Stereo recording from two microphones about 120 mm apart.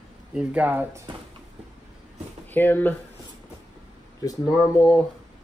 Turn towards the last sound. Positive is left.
turn(degrees=30)  # may be behind; listen again after turning